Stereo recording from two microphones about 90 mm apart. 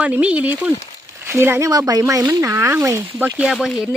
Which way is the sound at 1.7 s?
45° right (ahead or behind).